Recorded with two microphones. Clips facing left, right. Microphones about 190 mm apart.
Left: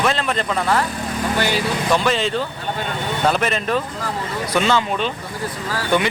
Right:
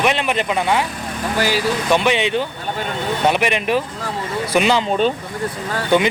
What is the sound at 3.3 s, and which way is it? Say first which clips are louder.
Speech: right 2 dB; 15° right (ahead or behind).